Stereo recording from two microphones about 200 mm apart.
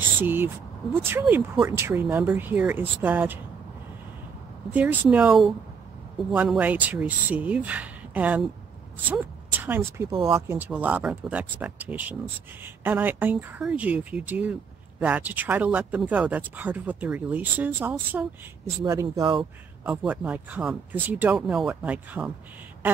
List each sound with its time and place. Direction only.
0.2 s speech: 10° right (ahead or behind)
4.7 s a woman's voice: 10° right (ahead or behind)
19.8 s speech: 5° right (ahead or behind)